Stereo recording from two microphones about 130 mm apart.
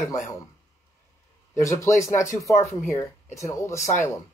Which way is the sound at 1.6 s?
20° left (ahead or behind).